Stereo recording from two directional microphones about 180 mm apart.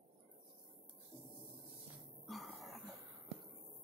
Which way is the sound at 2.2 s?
Centre (ahead or behind).